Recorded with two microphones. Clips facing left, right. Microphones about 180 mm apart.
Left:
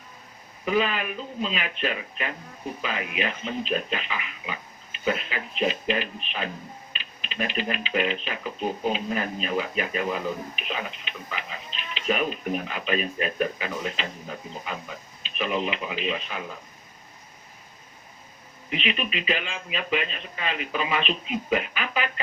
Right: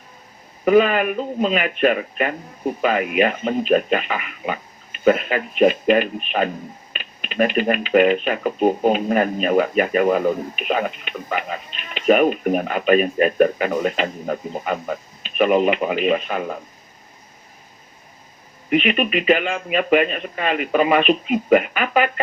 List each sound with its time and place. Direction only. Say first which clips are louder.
0.6 s speech: right 10 dB; 55° right (ahead or behind)
18.7 s speech: right 10 dB; 55° right (ahead or behind)